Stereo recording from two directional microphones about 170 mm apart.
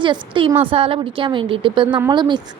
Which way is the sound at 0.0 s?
30° right (ahead or behind).